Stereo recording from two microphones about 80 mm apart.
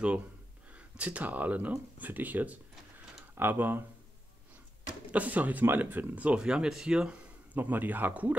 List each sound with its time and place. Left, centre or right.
0.7 s speech: centre
5.1 s speech: centre